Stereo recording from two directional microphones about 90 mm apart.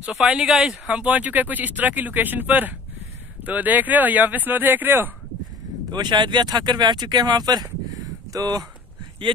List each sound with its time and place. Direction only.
0.0 s speech: 5° right (ahead or behind)
5.9 s speech: 55° right (ahead or behind)